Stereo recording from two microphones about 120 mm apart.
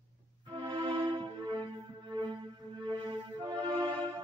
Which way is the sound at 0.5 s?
40° right (ahead or behind).